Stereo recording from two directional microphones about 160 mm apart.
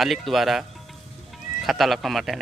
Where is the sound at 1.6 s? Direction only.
Centre (ahead or behind).